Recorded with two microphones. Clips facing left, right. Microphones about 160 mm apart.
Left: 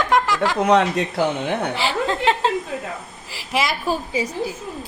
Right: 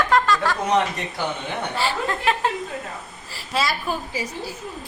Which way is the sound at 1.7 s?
20° left (ahead or behind).